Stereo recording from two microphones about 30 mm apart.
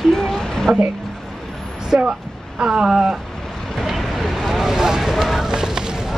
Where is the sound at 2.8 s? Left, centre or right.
Centre.